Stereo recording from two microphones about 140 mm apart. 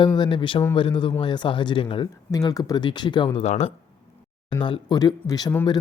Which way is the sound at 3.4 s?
50° left (ahead or behind).